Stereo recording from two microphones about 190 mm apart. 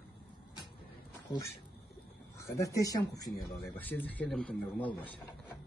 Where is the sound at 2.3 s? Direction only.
15° left (ahead or behind).